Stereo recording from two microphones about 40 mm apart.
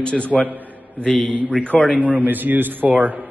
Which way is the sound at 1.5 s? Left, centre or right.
Left.